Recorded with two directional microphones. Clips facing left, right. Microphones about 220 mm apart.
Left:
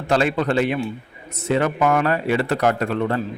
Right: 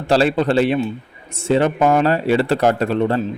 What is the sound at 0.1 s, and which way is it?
A man's voice, 30° right (ahead or behind).